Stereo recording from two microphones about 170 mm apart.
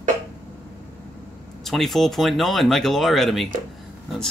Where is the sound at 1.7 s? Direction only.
Centre (ahead or behind).